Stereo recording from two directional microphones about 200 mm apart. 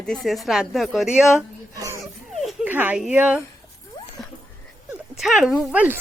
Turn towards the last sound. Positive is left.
turn(degrees=-10)  # may be behind; listen again after turning